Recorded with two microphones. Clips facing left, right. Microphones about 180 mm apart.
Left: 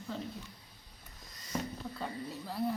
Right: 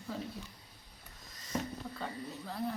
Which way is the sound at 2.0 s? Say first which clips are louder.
Left 3 dB; 5° left (ahead or behind).